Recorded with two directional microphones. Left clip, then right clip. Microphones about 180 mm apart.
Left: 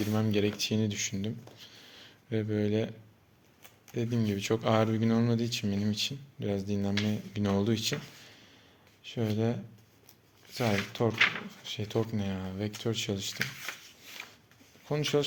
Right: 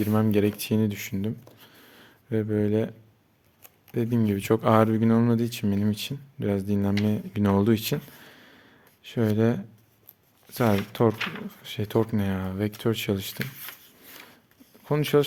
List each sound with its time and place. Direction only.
0.1 s speech: 40° right (ahead or behind)
3.9 s speech: 45° right (ahead or behind)
14.8 s speech: 50° right (ahead or behind)